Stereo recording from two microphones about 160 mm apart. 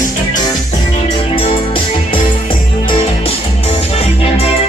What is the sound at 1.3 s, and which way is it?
Music, 35° left (ahead or behind).